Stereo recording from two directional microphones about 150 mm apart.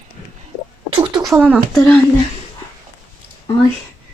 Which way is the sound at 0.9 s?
30° right (ahead or behind).